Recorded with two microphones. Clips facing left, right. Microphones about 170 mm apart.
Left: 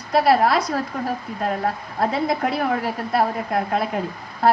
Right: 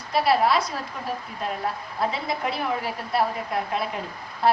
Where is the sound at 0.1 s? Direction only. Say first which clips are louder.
Left 4 dB; 45° left (ahead or behind).